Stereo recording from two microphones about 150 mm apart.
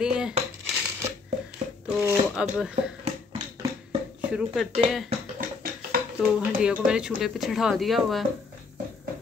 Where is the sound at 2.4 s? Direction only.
5° right (ahead or behind).